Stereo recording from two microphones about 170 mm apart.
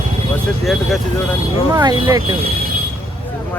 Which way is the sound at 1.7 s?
25° right (ahead or behind).